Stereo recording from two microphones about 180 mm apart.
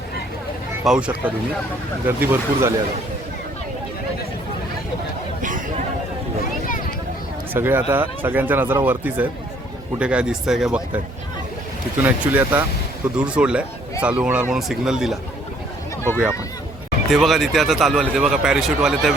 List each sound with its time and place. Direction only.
0.9 s speech: 5° right (ahead or behind)
5.4 s chatter: 45° right (ahead or behind)
7.5 s speech: 10° right (ahead or behind)
12.0 s speech: 10° right (ahead or behind)